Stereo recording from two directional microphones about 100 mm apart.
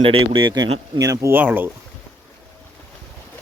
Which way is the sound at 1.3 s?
20° right (ahead or behind).